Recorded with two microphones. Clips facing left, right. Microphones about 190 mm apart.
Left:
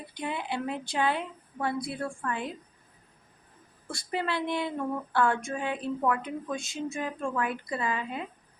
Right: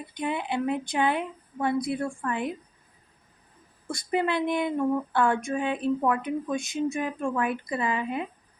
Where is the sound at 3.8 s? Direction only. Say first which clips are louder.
Right 5 dB; 20° right (ahead or behind).